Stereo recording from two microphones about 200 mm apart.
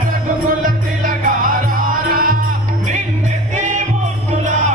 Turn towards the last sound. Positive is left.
turn(degrees=-35)  # may be behind; listen again after turning